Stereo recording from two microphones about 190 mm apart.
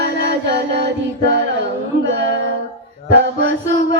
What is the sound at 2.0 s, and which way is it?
Music, 70° right (ahead or behind).